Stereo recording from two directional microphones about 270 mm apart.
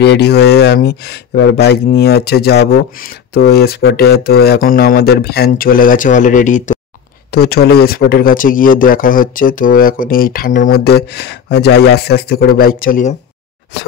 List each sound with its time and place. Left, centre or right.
0.0 s speech: left